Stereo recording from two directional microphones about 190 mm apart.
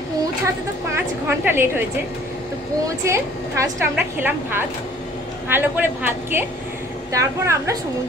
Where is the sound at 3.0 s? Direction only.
15° right (ahead or behind).